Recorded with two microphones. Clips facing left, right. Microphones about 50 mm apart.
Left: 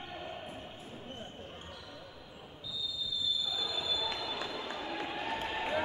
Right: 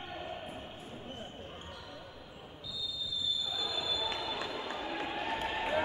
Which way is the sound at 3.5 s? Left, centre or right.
Centre.